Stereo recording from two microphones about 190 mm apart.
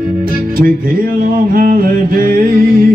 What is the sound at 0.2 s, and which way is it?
Music, 50° right (ahead or behind).